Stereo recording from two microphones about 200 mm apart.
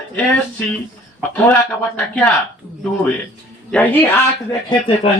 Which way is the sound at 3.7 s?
10° left (ahead or behind).